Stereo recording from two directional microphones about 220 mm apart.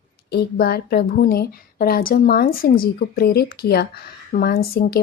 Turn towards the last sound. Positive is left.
turn(degrees=40)  # may be behind; listen again after turning